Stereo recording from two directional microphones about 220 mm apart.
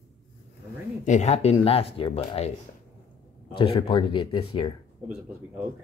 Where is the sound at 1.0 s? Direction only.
30° left (ahead or behind).